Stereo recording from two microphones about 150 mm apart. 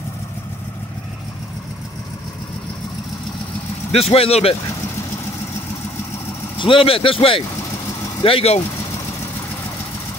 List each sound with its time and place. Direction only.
3.9 s speech: 40° left (ahead or behind)
6.6 s speech: 35° left (ahead or behind)